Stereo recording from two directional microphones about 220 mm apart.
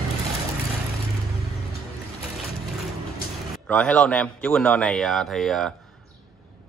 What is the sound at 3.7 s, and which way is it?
Speech, 5° left (ahead or behind).